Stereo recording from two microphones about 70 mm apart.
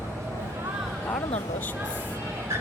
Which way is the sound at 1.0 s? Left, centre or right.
Left.